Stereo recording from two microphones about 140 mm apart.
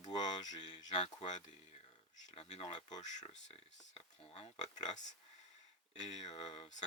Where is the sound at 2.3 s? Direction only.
45° left (ahead or behind).